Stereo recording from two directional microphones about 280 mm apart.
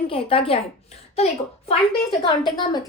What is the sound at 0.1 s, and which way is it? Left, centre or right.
A woman's voice, centre.